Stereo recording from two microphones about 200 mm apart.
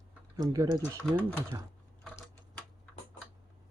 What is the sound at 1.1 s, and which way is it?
Speech, 20° right (ahead or behind).